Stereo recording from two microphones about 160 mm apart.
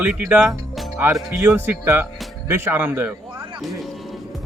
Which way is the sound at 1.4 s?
15° right (ahead or behind).